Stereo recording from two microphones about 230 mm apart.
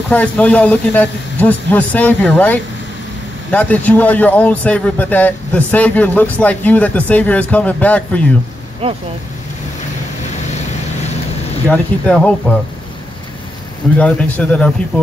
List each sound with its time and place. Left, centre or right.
0.1 s a man's voice: centre
8.8 s speech: right
11.7 s speech: centre
13.9 s speech: centre